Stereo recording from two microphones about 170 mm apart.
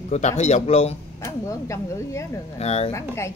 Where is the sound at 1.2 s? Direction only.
15° left (ahead or behind).